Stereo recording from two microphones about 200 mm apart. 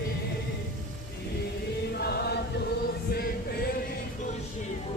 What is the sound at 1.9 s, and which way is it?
Chant, 55° left (ahead or behind).